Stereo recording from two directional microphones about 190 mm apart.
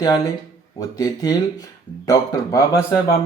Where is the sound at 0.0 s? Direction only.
20° left (ahead or behind).